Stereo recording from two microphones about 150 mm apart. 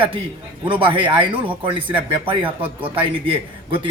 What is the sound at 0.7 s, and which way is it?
Speech, 35° right (ahead or behind).